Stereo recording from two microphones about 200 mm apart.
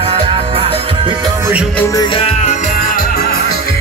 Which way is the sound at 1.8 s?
15° left (ahead or behind).